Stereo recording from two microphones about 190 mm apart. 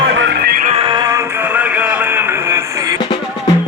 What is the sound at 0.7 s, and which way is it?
Music, 25° right (ahead or behind).